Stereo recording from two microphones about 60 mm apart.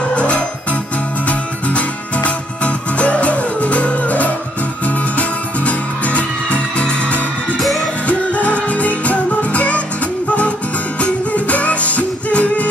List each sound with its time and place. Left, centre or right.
0.1 s music: centre
5.7 s music: left
11.0 s music: left